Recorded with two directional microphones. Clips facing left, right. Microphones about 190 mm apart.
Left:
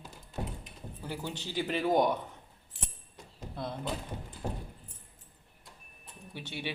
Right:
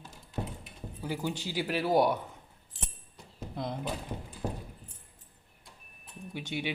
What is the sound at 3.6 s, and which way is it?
Speech, 15° right (ahead or behind).